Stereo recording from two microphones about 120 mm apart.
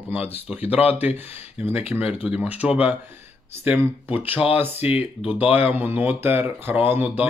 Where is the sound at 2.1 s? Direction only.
10° right (ahead or behind).